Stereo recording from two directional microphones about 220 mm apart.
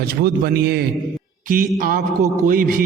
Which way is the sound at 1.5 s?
40° right (ahead or behind).